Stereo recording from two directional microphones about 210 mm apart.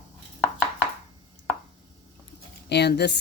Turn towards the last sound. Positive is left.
turn(degrees=55)  # may be behind; listen again after turning